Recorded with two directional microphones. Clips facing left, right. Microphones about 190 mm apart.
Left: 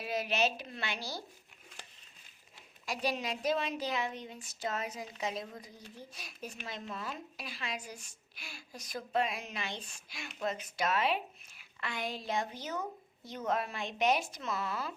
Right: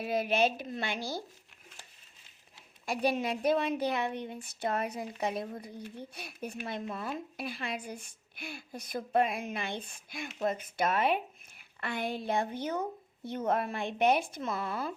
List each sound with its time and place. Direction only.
0.0 s a woman's voice: 50° right (ahead or behind)
2.8 s speech: 55° right (ahead or behind)